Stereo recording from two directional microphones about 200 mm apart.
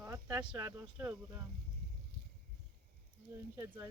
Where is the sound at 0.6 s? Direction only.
15° right (ahead or behind).